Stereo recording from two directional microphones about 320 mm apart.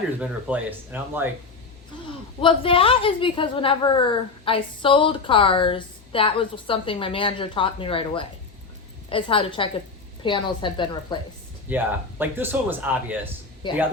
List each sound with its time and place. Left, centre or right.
0.2 s speech: centre
2.4 s a woman's voice: centre
11.7 s a man's voice: centre
13.6 s a woman's voice: centre